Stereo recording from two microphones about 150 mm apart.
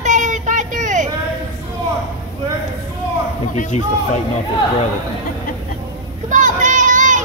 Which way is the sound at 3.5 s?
50° left (ahead or behind).